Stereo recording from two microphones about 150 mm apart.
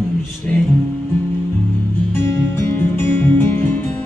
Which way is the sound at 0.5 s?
10° left (ahead or behind).